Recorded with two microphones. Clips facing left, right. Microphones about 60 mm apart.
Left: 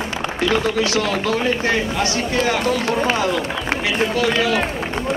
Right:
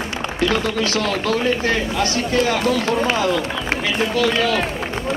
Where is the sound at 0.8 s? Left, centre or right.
Right.